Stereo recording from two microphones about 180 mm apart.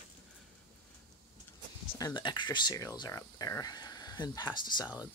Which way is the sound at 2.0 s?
25° left (ahead or behind).